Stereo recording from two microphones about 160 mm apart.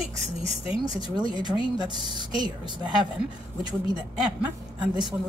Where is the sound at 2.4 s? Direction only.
25° right (ahead or behind).